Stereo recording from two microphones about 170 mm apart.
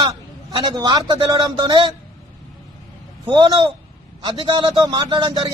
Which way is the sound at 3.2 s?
25° right (ahead or behind).